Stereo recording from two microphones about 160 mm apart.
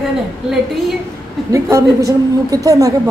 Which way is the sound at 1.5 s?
20° right (ahead or behind).